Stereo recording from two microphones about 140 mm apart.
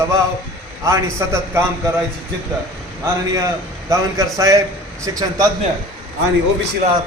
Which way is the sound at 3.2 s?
25° right (ahead or behind).